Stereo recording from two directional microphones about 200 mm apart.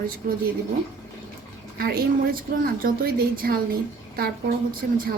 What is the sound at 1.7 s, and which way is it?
A woman's voice, 50° right (ahead or behind).